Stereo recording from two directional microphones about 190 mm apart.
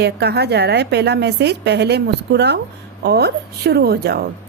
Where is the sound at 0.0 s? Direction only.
60° right (ahead or behind).